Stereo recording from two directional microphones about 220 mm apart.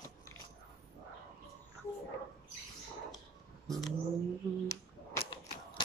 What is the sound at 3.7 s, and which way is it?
Bird, centre (ahead or behind).